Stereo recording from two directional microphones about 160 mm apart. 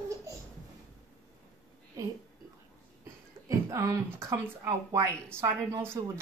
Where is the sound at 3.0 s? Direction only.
20° right (ahead or behind).